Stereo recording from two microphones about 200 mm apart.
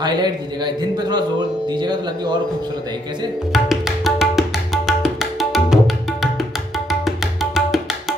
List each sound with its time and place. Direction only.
0.0 s a man's voice: 20° right (ahead or behind)
3.5 s tabla: centre (ahead or behind)